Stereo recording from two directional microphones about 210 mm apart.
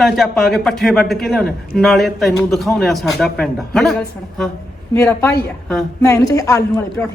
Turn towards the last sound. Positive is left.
turn(degrees=15)  # may be behind; listen again after turning